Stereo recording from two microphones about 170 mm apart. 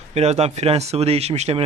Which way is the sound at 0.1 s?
40° right (ahead or behind).